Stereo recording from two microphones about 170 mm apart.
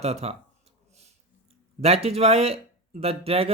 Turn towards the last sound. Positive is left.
turn(degrees=-35)  # may be behind; listen again after turning